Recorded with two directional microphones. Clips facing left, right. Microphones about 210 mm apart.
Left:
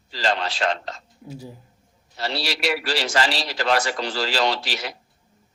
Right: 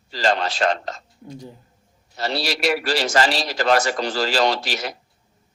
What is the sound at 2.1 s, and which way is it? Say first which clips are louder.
A man's voice: right 3 dB; 45° right (ahead or behind).